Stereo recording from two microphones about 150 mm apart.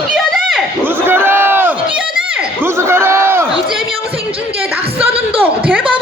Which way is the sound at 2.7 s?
15° right (ahead or behind).